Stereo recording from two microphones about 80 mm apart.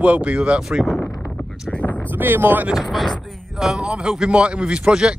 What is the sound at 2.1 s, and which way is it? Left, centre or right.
Speech, right.